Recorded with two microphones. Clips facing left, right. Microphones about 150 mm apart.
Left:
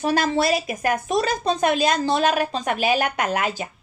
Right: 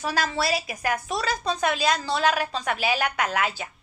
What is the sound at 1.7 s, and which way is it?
Speech, 50° left (ahead or behind).